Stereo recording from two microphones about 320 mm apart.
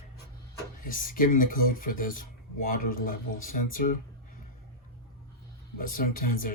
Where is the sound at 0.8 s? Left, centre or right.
Left.